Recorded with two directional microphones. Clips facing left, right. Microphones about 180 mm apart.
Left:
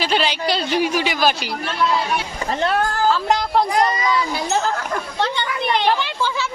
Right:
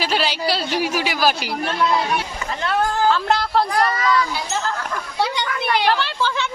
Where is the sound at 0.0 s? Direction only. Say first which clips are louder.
Left 1 dB; 5° right (ahead or behind).